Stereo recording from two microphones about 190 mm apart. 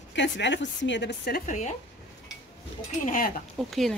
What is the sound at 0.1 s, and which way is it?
Speech, 70° left (ahead or behind).